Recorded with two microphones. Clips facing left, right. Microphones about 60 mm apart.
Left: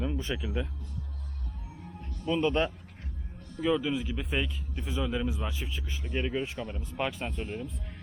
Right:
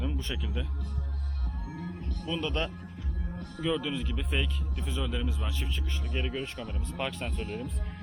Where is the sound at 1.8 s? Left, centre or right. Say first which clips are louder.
Right 6 dB; right.